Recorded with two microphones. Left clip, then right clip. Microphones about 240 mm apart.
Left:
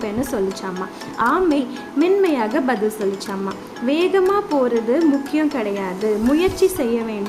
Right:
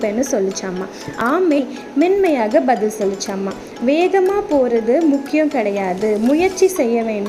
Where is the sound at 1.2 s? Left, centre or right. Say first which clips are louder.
Right 1 dB; centre.